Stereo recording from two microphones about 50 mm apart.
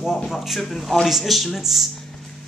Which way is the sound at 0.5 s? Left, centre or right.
Centre.